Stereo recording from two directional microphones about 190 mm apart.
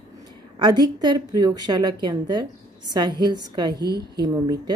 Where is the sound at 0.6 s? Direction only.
20° right (ahead or behind).